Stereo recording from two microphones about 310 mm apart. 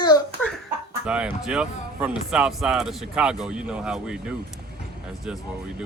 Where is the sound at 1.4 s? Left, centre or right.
Centre.